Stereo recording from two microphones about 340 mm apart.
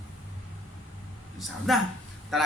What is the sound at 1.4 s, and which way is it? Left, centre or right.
Speech, centre.